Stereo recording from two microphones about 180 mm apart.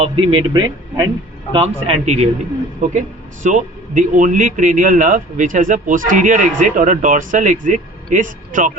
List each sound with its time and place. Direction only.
0.0 s a man's voice: 30° right (ahead or behind)
1.5 s a man's voice: 35° right (ahead or behind)